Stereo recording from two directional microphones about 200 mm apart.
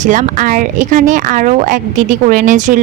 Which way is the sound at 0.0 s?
40° right (ahead or behind).